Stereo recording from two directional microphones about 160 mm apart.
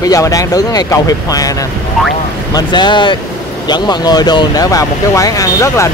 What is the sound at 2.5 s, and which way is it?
Speech, 30° left (ahead or behind).